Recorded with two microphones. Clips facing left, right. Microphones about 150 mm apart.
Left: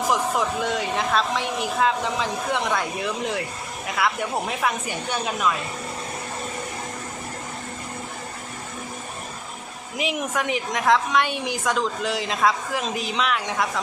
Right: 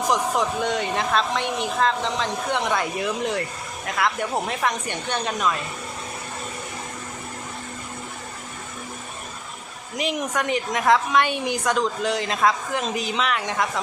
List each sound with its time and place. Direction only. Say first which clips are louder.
0.1 s a woman's voice: right 1 dB; centre (ahead or behind)
10.0 s a woman's voice: right 1 dB; centre (ahead or behind)